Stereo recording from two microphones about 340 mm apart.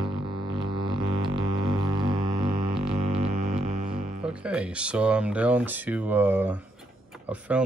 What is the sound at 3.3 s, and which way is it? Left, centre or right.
Music, right.